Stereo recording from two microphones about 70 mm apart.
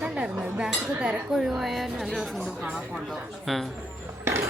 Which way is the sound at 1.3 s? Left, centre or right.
Centre.